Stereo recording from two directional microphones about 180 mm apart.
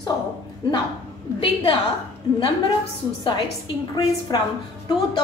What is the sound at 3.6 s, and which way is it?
Speech, 25° left (ahead or behind).